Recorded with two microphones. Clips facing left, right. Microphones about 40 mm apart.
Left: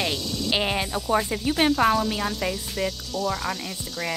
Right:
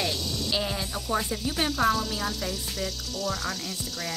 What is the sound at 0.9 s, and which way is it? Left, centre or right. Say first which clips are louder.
Speech: left 3 dB; left.